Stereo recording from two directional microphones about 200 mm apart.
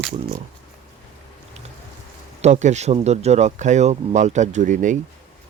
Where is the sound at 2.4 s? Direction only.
35° right (ahead or behind).